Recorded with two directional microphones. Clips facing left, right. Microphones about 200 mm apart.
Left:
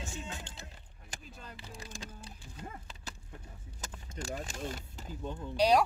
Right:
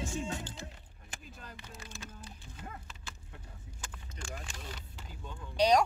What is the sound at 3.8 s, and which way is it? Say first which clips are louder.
Vehicle: left 6 dB; 40° left (ahead or behind).